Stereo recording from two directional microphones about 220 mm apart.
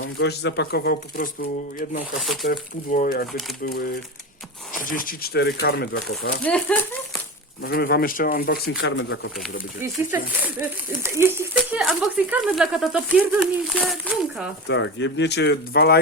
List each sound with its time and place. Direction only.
0.2 s speech: 50° left (ahead or behind)
2.2 s speech: centre (ahead or behind)
2.5 s speech: 40° left (ahead or behind)
6.4 s speech: 5° left (ahead or behind)
7.6 s speech: 45° left (ahead or behind)
8.8 s speech: 55° left (ahead or behind)
9.8 s speech: 10° right (ahead or behind)
14.7 s speech: 55° left (ahead or behind)